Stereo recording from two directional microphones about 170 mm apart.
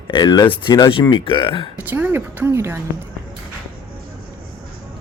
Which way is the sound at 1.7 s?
10° right (ahead or behind).